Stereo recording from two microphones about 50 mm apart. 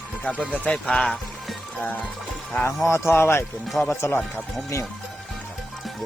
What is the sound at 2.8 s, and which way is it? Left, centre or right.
Speech, left.